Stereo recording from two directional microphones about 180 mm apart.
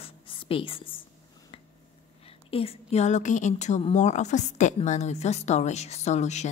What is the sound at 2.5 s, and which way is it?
A woman's voice, 35° left (ahead or behind).